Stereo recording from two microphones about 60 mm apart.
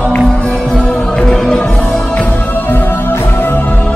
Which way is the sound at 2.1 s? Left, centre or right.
Left.